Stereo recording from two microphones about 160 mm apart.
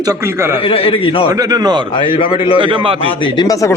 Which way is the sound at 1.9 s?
30° left (ahead or behind).